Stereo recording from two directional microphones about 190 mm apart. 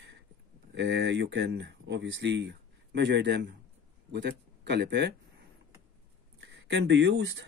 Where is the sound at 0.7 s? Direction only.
65° right (ahead or behind).